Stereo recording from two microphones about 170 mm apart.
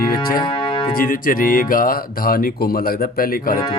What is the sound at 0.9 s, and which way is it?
Speech, 55° left (ahead or behind).